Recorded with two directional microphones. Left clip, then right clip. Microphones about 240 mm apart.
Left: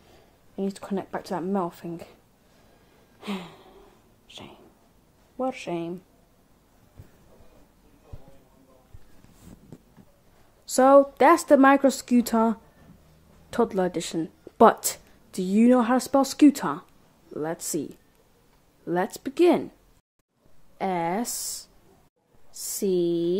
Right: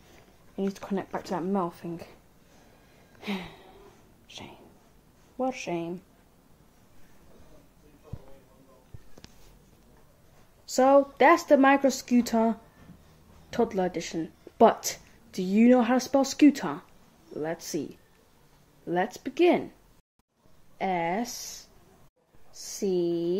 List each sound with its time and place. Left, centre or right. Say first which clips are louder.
0.6 s speech: left 1 dB; centre
3.2 s a sound: even; centre
5.4 s speech: left 1 dB; centre
10.6 s speech: left 4 dB; centre
20.7 s speech: left 1 dB; centre
22.6 s speech: left 3 dB; centre